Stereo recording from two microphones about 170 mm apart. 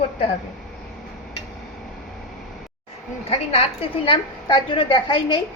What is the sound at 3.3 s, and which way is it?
A woman's voice, 35° left (ahead or behind).